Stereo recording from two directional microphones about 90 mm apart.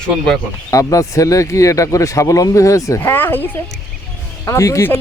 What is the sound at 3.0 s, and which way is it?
Speech, 25° left (ahead or behind).